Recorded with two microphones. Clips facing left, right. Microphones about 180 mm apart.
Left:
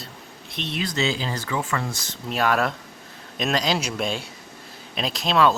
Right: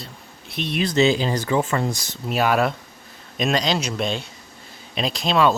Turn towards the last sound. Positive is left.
turn(degrees=0)  # may be behind; listen again after turning